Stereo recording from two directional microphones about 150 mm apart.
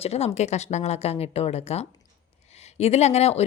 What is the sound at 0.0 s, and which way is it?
Speech, 45° left (ahead or behind).